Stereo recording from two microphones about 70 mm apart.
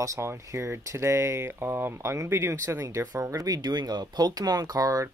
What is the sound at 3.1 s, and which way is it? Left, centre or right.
Speech, right.